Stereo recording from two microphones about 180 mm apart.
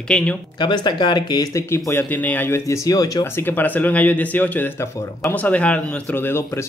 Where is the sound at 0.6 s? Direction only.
25° left (ahead or behind).